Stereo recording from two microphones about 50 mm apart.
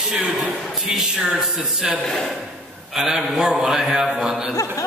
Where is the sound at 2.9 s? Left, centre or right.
Centre.